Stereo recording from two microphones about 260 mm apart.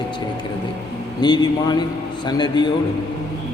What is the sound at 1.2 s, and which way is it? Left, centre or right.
A man's voice, centre.